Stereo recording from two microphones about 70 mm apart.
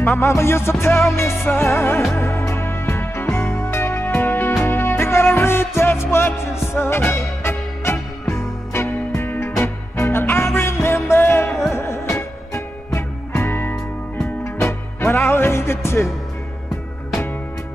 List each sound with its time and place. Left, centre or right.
0.2 s music: left
13.5 s music: left
14.2 s music: left